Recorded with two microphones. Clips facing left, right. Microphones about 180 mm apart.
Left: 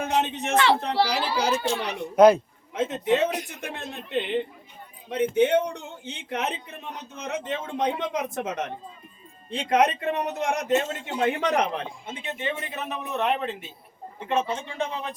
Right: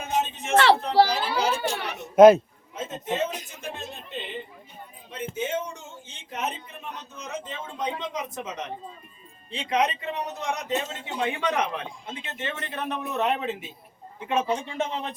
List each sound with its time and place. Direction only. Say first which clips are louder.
0.0 s a sound: left 3 dB; 65° left (ahead or behind)
1.0 s a child's voice: right 8 dB; 45° right (ahead or behind)
1.6 s speech: left 3 dB; 20° right (ahead or behind)
2.7 s a man's voice: left 6 dB; 70° left (ahead or behind); by 11.9 s 40° left (ahead or behind)
12.3 s speech: left 4 dB; 15° left (ahead or behind); by 15.1 s 25° right (ahead or behind)